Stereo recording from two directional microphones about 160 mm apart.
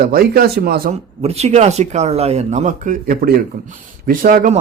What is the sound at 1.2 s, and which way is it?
A man's voice, 40° right (ahead or behind).